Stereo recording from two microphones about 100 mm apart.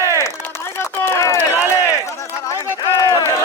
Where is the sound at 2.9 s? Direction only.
35° left (ahead or behind).